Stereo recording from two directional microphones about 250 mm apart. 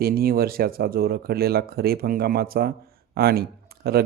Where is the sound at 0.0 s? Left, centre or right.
Right.